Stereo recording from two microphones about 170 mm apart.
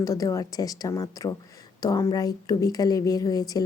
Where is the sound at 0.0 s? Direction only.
20° left (ahead or behind).